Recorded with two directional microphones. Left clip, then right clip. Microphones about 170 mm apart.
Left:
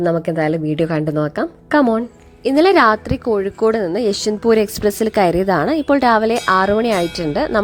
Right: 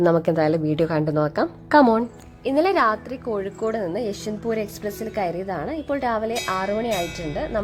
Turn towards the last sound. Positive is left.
turn(degrees=30)  # may be behind; listen again after turning